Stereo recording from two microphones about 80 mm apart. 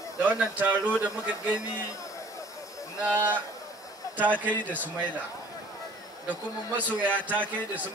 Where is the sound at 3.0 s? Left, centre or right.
Centre.